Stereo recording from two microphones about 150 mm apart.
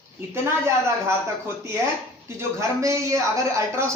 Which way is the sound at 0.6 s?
20° right (ahead or behind).